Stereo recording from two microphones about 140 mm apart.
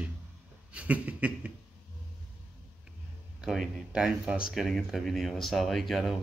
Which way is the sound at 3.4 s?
5° right (ahead or behind).